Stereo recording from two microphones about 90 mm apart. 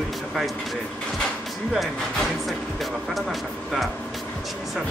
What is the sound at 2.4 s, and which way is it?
Speech, centre (ahead or behind).